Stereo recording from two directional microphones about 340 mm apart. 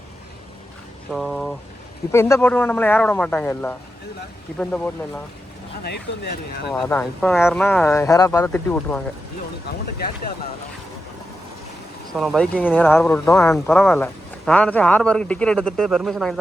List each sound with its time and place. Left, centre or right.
1.1 s speech: centre
5.8 s speech: left
6.7 s speech: centre
12.1 s speech: centre